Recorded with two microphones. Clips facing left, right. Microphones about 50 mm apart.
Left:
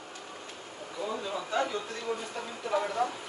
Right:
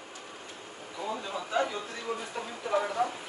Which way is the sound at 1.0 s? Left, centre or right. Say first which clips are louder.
Left 1 dB; centre.